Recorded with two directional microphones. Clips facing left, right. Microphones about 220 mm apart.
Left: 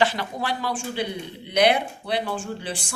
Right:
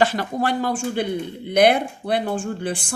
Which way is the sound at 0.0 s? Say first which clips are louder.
Right 4 dB; 45° right (ahead or behind).